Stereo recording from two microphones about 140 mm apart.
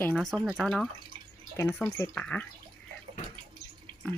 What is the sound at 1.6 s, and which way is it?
Speech, 20° left (ahead or behind).